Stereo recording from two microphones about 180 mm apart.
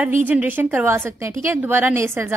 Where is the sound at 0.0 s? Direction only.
10° right (ahead or behind).